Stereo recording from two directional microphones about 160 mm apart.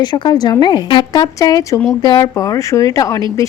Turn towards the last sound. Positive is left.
turn(degrees=20)  # may be behind; listen again after turning